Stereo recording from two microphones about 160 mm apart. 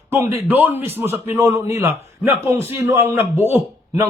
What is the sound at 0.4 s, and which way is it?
A man's voice, 10° right (ahead or behind).